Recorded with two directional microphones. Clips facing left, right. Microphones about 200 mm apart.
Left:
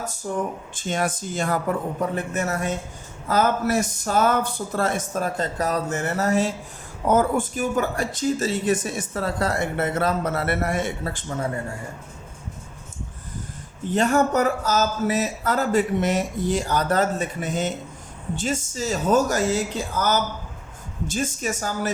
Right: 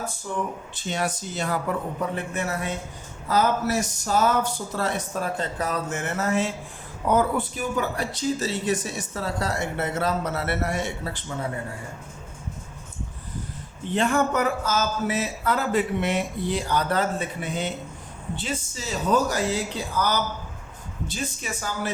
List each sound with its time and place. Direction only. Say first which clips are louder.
0.3 s speech: left 4 dB; 45° left (ahead or behind)
13.9 s speech: left 3 dB; 40° left (ahead or behind)